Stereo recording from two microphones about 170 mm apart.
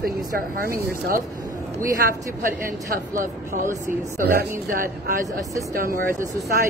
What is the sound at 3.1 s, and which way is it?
Speech, 50° right (ahead or behind).